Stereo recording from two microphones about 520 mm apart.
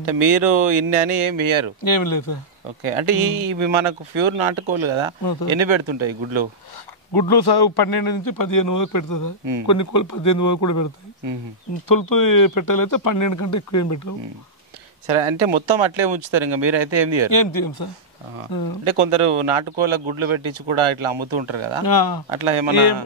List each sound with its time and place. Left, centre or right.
0.0 s speech: right
1.9 s speech: left
2.8 s speech: right
5.2 s a man's voice: left
5.5 s speech: right
7.2 s a man's voice: left
11.9 s speech: left
15.0 s speech: right
17.3 s speech: left
18.9 s speech: right
21.8 s speech: left
22.3 s speech: right